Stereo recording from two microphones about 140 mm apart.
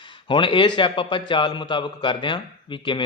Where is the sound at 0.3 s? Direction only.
35° left (ahead or behind).